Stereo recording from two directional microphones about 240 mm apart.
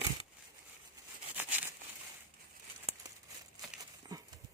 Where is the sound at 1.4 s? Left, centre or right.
Centre.